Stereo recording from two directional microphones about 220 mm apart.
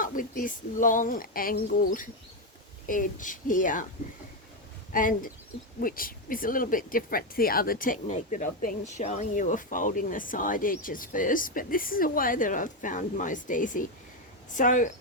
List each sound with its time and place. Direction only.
0.0 s speech: 40° left (ahead or behind)
4.9 s speech: 40° left (ahead or behind)